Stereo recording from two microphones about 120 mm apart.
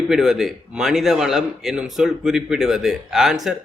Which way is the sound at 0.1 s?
5° right (ahead or behind).